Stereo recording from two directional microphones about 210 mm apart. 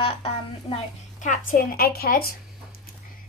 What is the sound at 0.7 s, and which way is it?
A woman's voice, 35° left (ahead or behind).